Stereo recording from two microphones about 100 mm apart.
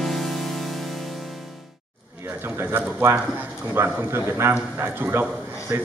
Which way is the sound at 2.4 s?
20° right (ahead or behind).